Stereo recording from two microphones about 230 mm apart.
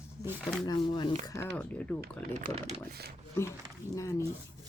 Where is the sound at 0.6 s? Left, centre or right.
Centre.